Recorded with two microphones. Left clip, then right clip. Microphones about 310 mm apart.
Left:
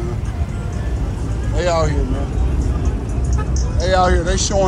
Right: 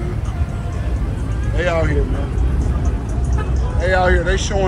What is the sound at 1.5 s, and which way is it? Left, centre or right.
Speech, centre.